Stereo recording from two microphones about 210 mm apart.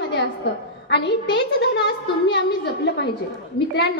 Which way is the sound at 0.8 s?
55° left (ahead or behind).